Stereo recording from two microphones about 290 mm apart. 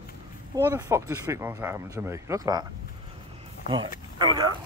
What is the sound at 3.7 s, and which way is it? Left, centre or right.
Speech, centre.